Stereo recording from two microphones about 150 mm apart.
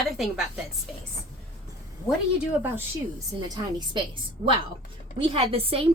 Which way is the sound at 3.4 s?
30° right (ahead or behind).